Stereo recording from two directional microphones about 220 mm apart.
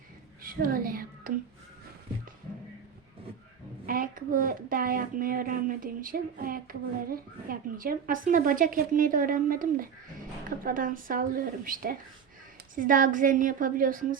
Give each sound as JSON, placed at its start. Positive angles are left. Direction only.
{"t": 0.4, "sound": "speech", "side_deg": -40}
{"t": 3.8, "sound": "a woman's voice", "side_deg": -40}